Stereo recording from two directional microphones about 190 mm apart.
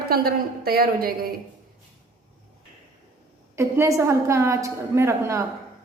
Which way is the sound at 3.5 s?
15° right (ahead or behind).